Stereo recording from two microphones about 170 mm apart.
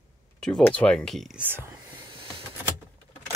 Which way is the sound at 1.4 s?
10° right (ahead or behind).